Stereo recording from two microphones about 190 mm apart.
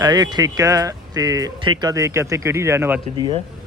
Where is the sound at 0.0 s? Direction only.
20° right (ahead or behind).